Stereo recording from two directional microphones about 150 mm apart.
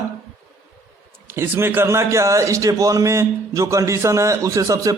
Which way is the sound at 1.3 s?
15° right (ahead or behind).